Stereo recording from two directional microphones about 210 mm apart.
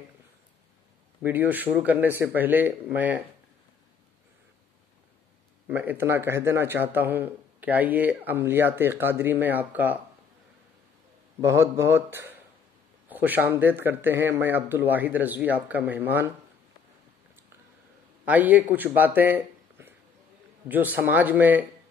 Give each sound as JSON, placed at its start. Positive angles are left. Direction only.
{"t": 1.2, "sound": "speech", "side_deg": -10}
{"t": 5.7, "sound": "speech", "side_deg": -10}
{"t": 11.4, "sound": "speech", "side_deg": -15}
{"t": 18.2, "sound": "speech", "side_deg": -5}